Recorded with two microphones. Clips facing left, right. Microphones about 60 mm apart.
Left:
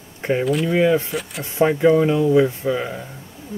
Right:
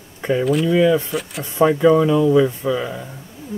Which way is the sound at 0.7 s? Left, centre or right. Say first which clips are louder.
Right 2 dB; left.